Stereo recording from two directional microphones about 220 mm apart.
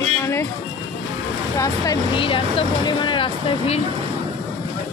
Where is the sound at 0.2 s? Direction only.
10° left (ahead or behind).